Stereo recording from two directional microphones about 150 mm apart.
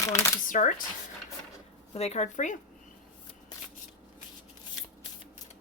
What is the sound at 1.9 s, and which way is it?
Speech, 45° left (ahead or behind).